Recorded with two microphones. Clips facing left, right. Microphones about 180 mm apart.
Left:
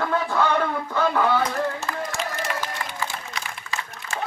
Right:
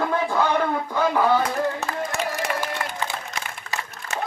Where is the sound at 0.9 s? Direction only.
10° right (ahead or behind).